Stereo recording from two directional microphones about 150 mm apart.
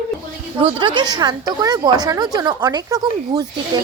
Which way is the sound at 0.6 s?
35° right (ahead or behind).